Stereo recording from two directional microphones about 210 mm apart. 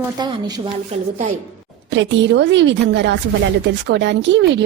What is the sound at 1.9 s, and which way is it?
A woman's voice, 60° right (ahead or behind).